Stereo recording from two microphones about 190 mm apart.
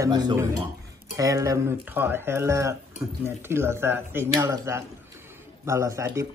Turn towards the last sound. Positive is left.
turn(degrees=-15)  # may be behind; listen again after turning